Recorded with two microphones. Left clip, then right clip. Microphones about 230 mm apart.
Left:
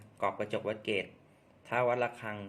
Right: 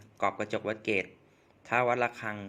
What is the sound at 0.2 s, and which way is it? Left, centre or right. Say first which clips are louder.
A man's voice: right 3 dB; right.